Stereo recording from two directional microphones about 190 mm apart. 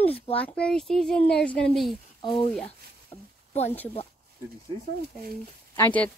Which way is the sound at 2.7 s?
35° left (ahead or behind).